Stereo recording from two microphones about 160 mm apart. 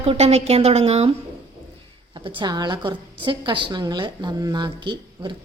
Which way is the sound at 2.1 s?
30° right (ahead or behind).